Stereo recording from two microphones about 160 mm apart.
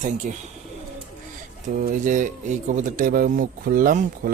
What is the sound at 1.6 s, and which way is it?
Speech, 60° right (ahead or behind).